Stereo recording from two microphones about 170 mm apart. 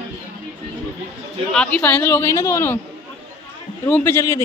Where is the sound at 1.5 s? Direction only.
5° left (ahead or behind).